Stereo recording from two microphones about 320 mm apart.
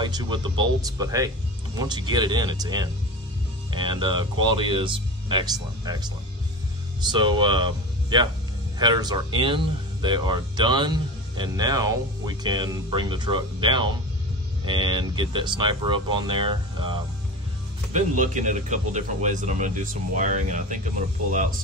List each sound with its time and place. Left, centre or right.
0.0 s speech: centre